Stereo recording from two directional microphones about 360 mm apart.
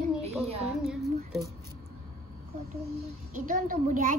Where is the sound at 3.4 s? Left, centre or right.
Right.